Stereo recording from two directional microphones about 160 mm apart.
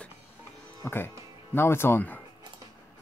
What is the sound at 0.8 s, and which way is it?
Speech, 15° left (ahead or behind).